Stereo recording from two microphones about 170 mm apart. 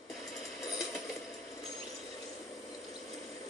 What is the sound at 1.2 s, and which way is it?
Ratchet, centre (ahead or behind).